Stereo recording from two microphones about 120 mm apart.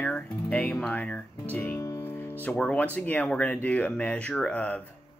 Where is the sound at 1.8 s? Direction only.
20° left (ahead or behind).